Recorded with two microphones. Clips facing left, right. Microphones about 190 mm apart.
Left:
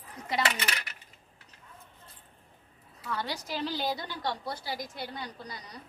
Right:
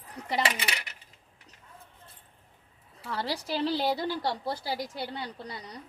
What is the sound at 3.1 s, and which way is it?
A woman's voice, 30° right (ahead or behind).